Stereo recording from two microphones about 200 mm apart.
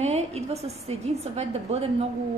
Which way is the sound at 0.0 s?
35° right (ahead or behind).